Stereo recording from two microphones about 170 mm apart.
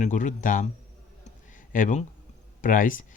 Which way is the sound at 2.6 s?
55° left (ahead or behind).